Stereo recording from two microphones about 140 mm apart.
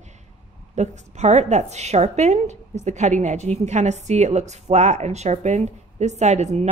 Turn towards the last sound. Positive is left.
turn(degrees=-55)  # may be behind; listen again after turning